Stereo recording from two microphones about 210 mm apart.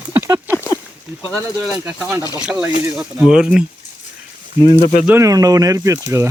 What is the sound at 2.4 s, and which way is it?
Speech, 5° right (ahead or behind).